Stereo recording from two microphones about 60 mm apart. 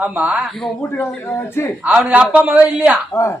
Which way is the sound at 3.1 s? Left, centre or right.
Left.